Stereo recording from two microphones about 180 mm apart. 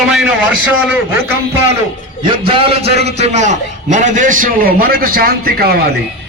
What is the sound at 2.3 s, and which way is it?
A man's voice, 30° right (ahead or behind).